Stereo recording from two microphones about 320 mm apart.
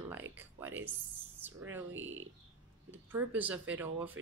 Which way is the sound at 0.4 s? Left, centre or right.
Centre.